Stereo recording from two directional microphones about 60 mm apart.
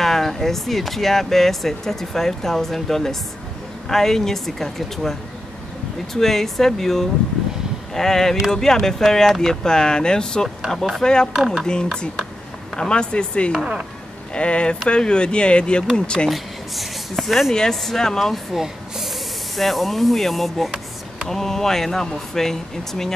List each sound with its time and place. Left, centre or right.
0.0 s speech: centre
6.1 s speech: centre
11.6 s speech: centre
16.3 s speech: centre